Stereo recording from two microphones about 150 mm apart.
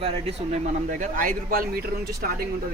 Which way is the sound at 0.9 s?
60° right (ahead or behind).